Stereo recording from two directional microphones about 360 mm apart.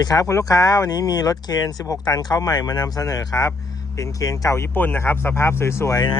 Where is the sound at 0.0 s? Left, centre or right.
Centre.